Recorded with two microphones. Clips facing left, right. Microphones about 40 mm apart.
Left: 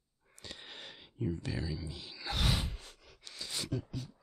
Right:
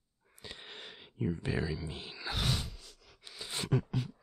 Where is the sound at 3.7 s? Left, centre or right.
Right.